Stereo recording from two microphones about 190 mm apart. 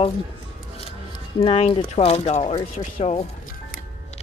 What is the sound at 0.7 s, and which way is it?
Speech, 30° left (ahead or behind).